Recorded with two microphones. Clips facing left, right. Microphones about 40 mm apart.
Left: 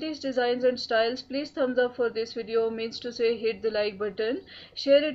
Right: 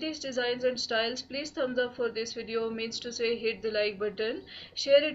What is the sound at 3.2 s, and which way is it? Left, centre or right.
A woman's voice, centre.